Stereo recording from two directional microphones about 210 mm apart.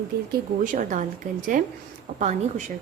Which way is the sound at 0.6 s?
40° right (ahead or behind).